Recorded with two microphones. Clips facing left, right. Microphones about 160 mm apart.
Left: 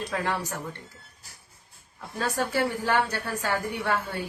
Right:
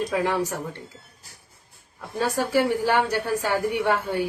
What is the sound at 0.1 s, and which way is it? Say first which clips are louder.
Speech: right 5 dB; 15° right (ahead or behind).